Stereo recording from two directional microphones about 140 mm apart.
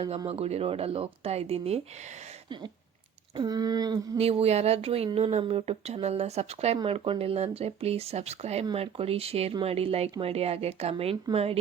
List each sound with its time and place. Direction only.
0.3 s speech: 45° right (ahead or behind)
3.3 s speech: 30° right (ahead or behind)
4.2 s speech: 45° right (ahead or behind)